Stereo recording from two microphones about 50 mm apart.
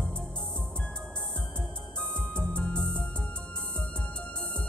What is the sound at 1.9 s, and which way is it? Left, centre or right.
Music, centre.